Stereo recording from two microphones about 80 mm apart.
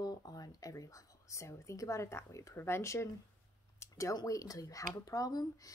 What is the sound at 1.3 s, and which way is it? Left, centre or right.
A woman's voice, left.